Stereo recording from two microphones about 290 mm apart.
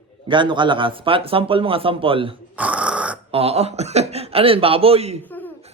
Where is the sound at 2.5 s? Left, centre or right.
Centre.